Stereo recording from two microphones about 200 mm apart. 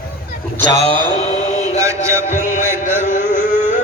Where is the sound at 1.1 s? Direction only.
30° left (ahead or behind).